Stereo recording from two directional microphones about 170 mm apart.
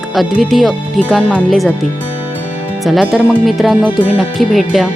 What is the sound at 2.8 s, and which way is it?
Speech, centre (ahead or behind).